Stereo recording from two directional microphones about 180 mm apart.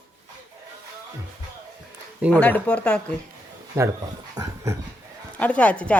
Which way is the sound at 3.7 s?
20° right (ahead or behind).